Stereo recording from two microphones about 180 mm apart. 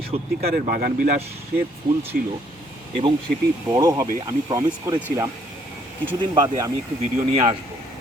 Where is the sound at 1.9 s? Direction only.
30° right (ahead or behind).